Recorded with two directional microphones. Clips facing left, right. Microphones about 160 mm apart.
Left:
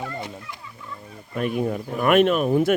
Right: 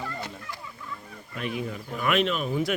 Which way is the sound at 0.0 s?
20° left (ahead or behind).